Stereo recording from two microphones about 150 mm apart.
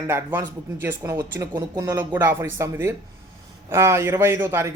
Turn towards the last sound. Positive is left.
turn(degrees=-20)  # may be behind; listen again after turning